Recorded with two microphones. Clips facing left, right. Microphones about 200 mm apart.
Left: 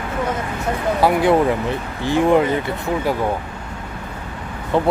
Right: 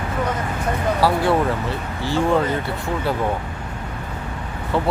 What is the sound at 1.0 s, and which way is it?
Speech, 20° left (ahead or behind).